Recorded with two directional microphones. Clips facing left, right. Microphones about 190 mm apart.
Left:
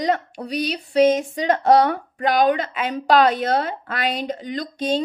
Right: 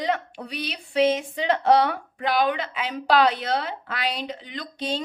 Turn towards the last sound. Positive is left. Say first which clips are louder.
# left 7 dB
turn(degrees=45)  # may be behind; listen again after turning